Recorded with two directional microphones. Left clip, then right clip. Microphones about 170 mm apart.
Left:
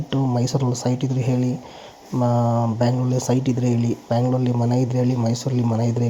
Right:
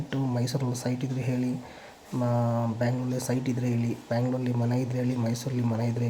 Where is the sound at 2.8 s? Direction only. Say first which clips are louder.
Left 8 dB; 35° left (ahead or behind).